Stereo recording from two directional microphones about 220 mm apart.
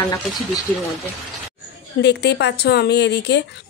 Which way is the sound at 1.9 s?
50° left (ahead or behind).